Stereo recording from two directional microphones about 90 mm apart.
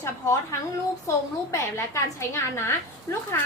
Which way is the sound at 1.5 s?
30° left (ahead or behind).